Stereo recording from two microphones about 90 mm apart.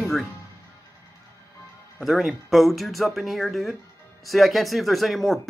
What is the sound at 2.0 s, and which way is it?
Speech, centre (ahead or behind).